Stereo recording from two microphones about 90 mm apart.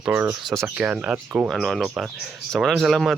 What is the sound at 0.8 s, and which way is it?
Speech, 10° right (ahead or behind).